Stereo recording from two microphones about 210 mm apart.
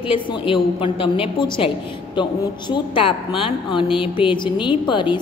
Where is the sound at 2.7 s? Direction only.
25° left (ahead or behind).